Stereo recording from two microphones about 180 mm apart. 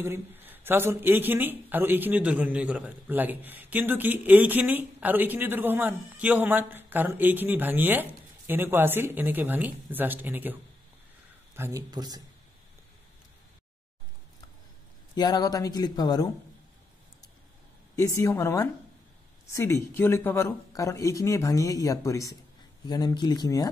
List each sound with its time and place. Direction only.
0.0 s speech: 10° right (ahead or behind)
15.1 s speech: 20° left (ahead or behind)
17.9 s speech: 20° left (ahead or behind)